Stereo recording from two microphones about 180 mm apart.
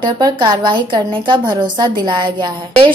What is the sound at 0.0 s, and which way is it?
A woman's voice, 25° right (ahead or behind).